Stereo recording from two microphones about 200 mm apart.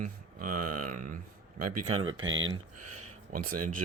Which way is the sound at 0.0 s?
45° right (ahead or behind).